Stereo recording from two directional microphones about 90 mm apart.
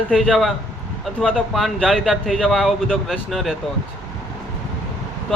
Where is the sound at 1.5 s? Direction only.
Centre (ahead or behind).